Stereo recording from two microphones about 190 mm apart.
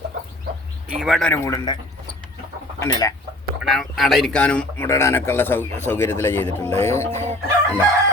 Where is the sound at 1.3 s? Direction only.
15° left (ahead or behind).